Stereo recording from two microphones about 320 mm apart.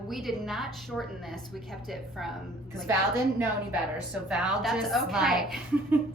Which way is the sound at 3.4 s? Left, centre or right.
Centre.